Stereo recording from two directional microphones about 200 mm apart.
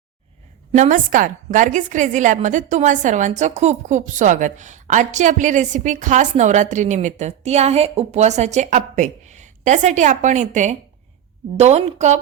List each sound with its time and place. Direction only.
0.7 s a woman's voice: 40° right (ahead or behind)